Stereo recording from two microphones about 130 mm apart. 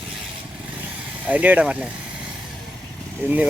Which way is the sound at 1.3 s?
10° right (ahead or behind).